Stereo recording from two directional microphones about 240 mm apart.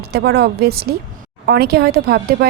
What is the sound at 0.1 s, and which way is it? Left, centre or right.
Speech, right.